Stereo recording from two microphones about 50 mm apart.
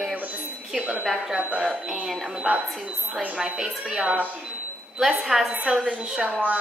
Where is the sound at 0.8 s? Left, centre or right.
Right.